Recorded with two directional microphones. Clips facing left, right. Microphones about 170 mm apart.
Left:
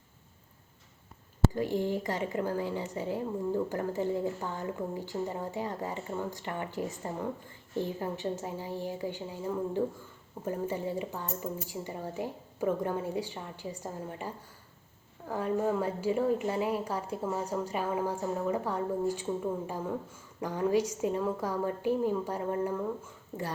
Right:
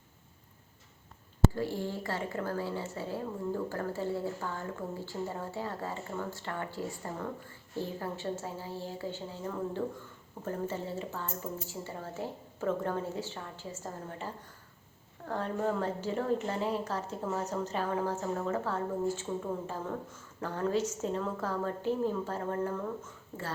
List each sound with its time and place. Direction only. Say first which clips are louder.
1.5 s a woman's voice: left 4 dB; 15° left (ahead or behind)